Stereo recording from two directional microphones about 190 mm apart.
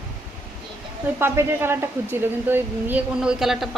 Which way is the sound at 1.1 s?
10° right (ahead or behind).